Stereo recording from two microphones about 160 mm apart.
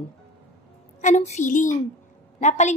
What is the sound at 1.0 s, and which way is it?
A woman's voice, 45° left (ahead or behind).